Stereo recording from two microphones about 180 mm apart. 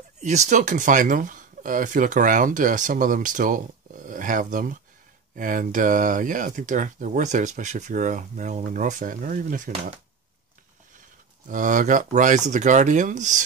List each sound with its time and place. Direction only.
0.2 s speech: 40° right (ahead or behind)
11.4 s speech: 45° right (ahead or behind)